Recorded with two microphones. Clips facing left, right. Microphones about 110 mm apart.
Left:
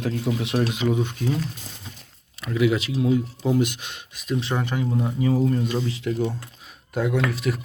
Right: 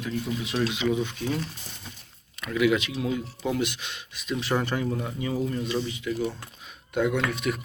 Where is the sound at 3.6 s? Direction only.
45° left (ahead or behind).